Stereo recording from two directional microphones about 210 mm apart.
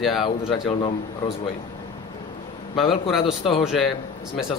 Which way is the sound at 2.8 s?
Centre (ahead or behind).